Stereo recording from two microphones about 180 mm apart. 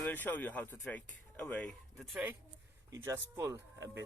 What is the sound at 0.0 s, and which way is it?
Speech, 10° left (ahead or behind).